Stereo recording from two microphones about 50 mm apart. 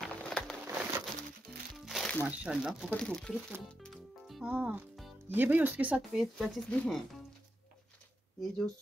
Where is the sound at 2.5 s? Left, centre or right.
Right.